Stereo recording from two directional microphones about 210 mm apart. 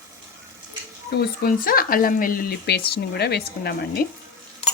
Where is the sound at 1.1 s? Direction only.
50° left (ahead or behind).